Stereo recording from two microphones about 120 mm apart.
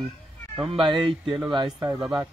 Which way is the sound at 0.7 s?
45° right (ahead or behind).